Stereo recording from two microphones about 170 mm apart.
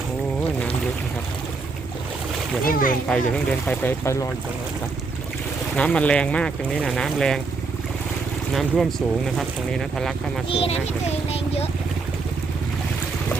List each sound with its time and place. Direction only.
2.6 s speech: 55° left (ahead or behind)
3.1 s speech: 5° left (ahead or behind)
5.7 s speech: 5° left (ahead or behind)
8.5 s speech: centre (ahead or behind)
10.5 s a child's voice: 35° left (ahead or behind)